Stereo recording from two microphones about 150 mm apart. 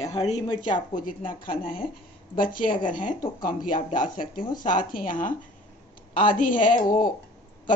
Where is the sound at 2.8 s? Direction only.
60° left (ahead or behind).